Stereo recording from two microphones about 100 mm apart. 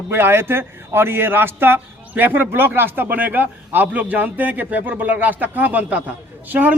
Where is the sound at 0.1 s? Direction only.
25° right (ahead or behind).